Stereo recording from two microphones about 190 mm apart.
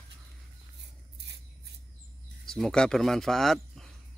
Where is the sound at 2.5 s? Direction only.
Centre (ahead or behind).